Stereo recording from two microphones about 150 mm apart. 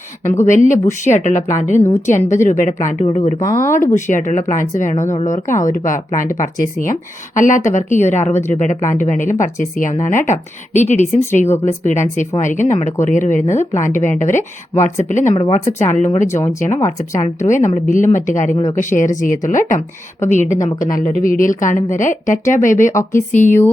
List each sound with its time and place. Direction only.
0.3 s speech: 20° left (ahead or behind)
0.9 s a woman's voice: 50° left (ahead or behind)
3.3 s speech: 20° left (ahead or behind)
3.9 s a woman's voice: 55° left (ahead or behind)
15.6 s speech: 15° left (ahead or behind)
17.4 s a woman's voice: 55° left (ahead or behind)